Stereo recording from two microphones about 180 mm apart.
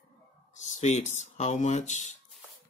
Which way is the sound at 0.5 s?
40° left (ahead or behind).